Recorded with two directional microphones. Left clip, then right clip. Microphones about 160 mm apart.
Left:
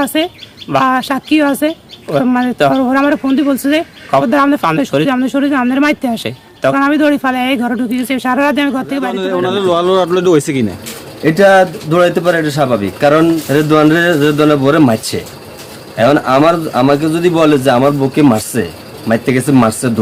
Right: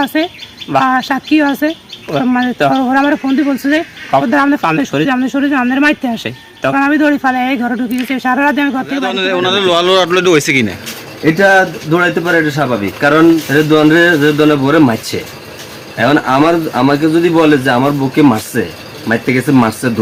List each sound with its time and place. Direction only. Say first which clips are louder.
0.0 s a man's voice: even; 40° left (ahead or behind)